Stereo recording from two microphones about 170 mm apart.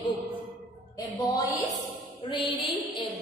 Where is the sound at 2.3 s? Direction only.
30° left (ahead or behind).